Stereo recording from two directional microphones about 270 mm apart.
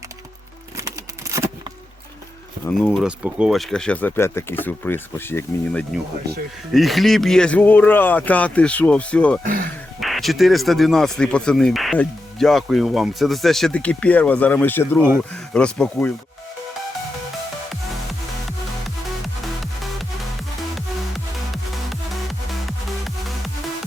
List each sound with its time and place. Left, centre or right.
0.8 s a sound: centre
2.6 s speech: centre
9.4 s speech: right
10.0 s speech: centre
21.5 s music: centre